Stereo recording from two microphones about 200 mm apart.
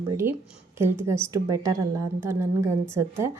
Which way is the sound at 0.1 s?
10° right (ahead or behind).